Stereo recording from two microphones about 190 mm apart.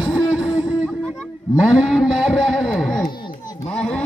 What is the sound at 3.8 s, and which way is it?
Speech, 5° left (ahead or behind).